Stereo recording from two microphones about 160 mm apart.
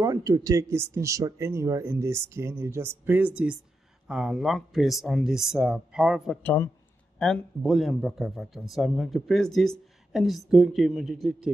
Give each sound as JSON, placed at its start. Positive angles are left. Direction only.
{"t": 0.0, "sound": "speech", "side_deg": -20}
{"t": 4.1, "sound": "a man's voice", "side_deg": -5}
{"t": 6.4, "sound": "speech", "side_deg": 15}
{"t": 7.2, "sound": "a man's voice", "side_deg": 5}